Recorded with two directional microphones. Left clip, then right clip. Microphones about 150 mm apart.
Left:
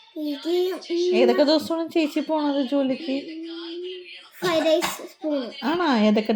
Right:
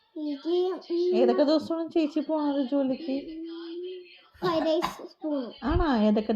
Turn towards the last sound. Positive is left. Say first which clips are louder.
# left 5 dB
turn(degrees=65)  # may be behind; listen again after turning